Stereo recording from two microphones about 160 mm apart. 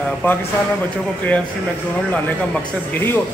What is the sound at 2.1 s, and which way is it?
Speech, 10° left (ahead or behind).